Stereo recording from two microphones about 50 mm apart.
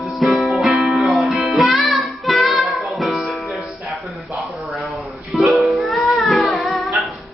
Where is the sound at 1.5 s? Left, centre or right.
Centre.